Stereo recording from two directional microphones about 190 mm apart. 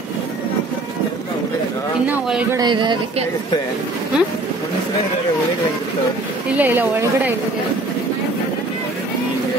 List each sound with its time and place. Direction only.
2.0 s a man's voice: 5° right (ahead or behind)
2.5 s speech: 25° right (ahead or behind)
6.6 s a woman's voice: 10° right (ahead or behind)